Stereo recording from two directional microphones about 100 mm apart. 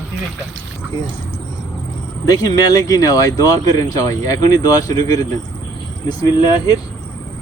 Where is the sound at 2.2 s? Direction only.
35° left (ahead or behind).